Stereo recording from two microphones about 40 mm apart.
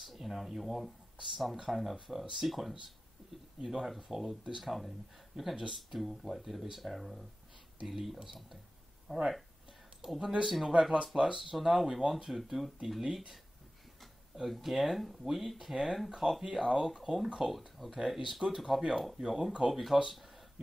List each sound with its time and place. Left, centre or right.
0.0 s speech: centre
10.7 s speech: right; by 17.9 s centre
17.9 s speech: centre
19.7 s speech: centre